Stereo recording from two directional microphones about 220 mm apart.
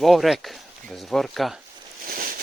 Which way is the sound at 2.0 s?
40° right (ahead or behind).